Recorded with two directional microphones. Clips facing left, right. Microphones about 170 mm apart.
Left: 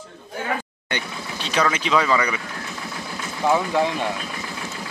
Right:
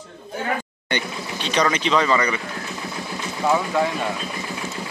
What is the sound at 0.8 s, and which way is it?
Speech, 5° left (ahead or behind).